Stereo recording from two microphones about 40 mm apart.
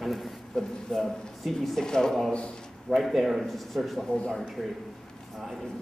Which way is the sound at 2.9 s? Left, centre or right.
Centre.